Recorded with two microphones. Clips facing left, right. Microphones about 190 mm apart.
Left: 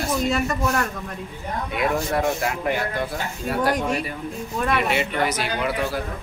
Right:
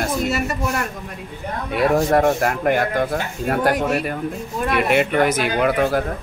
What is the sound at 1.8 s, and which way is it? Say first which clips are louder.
Speech: right 7 dB; 40° right (ahead or behind).